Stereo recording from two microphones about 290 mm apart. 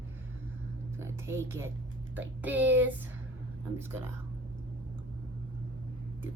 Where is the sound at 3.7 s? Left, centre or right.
Centre.